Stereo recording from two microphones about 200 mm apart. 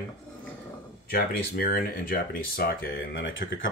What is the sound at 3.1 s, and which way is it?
Speech, 70° left (ahead or behind).